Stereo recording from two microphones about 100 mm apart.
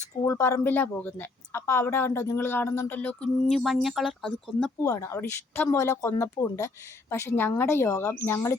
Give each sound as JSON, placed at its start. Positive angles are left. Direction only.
{"t": 0.3, "sound": "a woman's voice", "side_deg": 30}
{"t": 4.9, "sound": "speech", "side_deg": 30}